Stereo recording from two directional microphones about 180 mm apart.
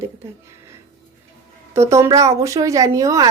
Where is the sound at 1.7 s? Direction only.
15° right (ahead or behind).